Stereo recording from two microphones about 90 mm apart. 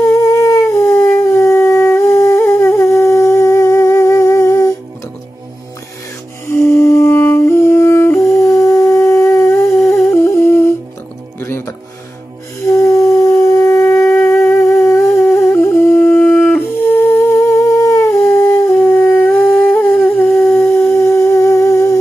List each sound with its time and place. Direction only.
0.0 s howl: 35° left (ahead or behind)
6.4 s music: 30° left (ahead or behind)
10.1 s humming: 30° left (ahead or behind)
11.3 s music: 25° left (ahead or behind)
16.1 s music: 20° left (ahead or behind)
17.4 s humming: 35° left (ahead or behind)
18.8 s humming: 20° left (ahead or behind)